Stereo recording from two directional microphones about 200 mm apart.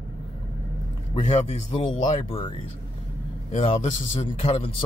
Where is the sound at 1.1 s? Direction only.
35° left (ahead or behind).